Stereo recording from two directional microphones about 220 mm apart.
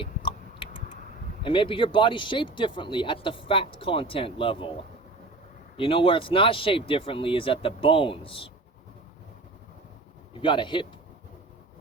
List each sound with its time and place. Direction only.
0.0 s tick-tock: 25° left (ahead or behind)
1.4 s speech: 25° left (ahead or behind)
5.7 s speech: 25° left (ahead or behind)
10.4 s speech: 20° left (ahead or behind)